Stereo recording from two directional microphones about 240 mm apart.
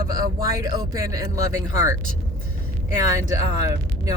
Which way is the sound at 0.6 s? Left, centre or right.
Centre.